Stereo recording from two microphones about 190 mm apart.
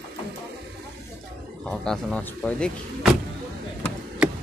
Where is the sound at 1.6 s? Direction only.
5° left (ahead or behind).